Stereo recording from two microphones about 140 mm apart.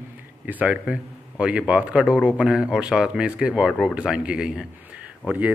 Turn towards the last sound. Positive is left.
turn(degrees=-10)  # may be behind; listen again after turning